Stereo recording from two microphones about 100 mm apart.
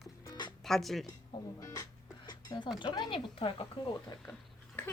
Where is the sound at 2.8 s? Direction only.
45° left (ahead or behind).